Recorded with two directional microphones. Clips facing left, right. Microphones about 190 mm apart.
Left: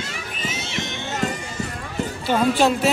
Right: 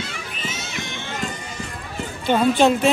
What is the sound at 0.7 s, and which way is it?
Run, 20° left (ahead or behind).